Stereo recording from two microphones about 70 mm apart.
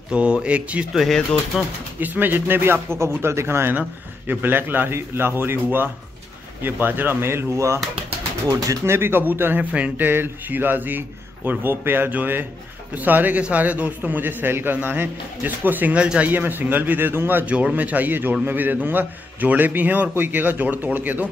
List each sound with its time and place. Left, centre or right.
0.1 s speech: centre
0.9 s speech: centre
2.0 s a man's voice: right
8.5 s speech: right
8.8 s speech: right; by 16.3 s centre
16.3 s speech: right
17.5 s speech: centre